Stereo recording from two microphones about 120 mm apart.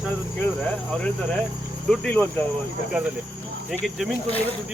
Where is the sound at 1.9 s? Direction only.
10° left (ahead or behind).